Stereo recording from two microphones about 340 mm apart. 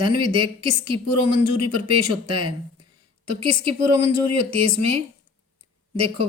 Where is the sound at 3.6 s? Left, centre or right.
Right.